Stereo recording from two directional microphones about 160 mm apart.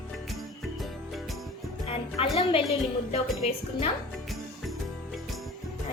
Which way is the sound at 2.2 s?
35° left (ahead or behind).